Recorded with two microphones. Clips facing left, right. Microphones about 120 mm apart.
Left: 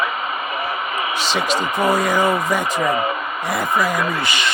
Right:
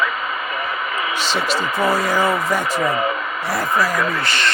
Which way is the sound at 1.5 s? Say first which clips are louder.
Left 1 dB; 15° left (ahead or behind).